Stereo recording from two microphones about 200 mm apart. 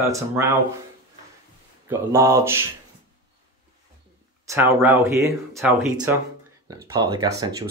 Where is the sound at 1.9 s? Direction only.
15° right (ahead or behind).